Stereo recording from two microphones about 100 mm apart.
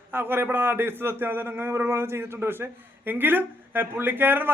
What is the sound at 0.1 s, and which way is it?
A man's voice, 20° right (ahead or behind).